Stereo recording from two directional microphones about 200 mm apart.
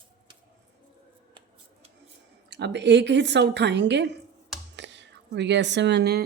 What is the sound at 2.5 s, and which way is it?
Speech, 60° right (ahead or behind).